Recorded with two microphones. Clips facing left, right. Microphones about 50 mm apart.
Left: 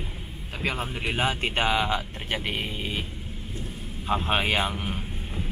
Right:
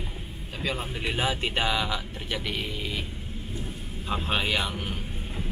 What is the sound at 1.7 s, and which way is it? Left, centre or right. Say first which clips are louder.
Speech: left 3 dB; left.